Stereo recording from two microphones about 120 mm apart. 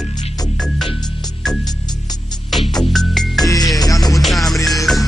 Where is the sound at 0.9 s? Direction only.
35° left (ahead or behind).